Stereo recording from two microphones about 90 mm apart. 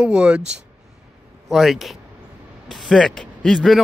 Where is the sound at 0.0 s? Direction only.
10° right (ahead or behind).